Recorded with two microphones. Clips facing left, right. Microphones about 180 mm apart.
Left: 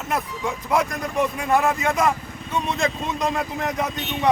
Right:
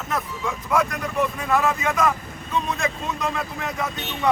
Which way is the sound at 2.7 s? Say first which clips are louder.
Left 2 dB; 15° left (ahead or behind).